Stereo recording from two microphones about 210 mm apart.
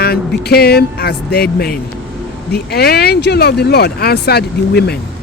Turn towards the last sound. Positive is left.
turn(degrees=50)  # may be behind; listen again after turning